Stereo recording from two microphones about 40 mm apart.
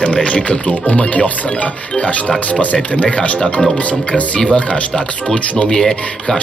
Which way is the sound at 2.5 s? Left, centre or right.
Left.